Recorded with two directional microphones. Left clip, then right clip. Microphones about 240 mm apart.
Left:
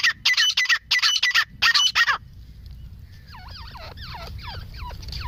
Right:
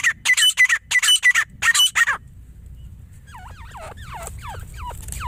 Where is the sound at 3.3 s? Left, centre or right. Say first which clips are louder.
Right 2 dB; right.